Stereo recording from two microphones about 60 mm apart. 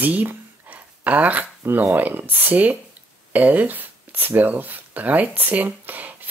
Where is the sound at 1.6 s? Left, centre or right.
Right.